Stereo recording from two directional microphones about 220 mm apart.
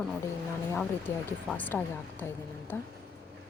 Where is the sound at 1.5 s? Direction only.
5° left (ahead or behind).